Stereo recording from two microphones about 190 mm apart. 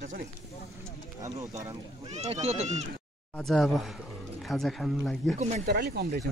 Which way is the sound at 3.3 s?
Centre (ahead or behind).